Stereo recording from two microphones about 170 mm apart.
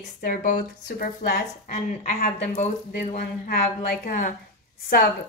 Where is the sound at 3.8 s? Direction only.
55° left (ahead or behind).